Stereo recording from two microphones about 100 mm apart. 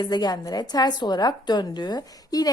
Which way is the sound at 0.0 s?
45° left (ahead or behind).